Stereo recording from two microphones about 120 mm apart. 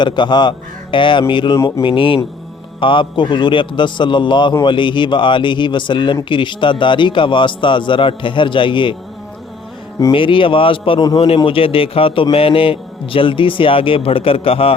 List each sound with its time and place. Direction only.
0.0 s a man's voice: 40° left (ahead or behind)
1.5 s mantra: 25° left (ahead or behind)
1.8 s a man's voice: 45° left (ahead or behind)
10.1 s a man's voice: 45° left (ahead or behind)